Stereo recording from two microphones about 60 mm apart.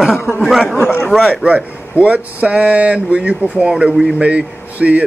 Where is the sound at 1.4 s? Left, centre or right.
Right.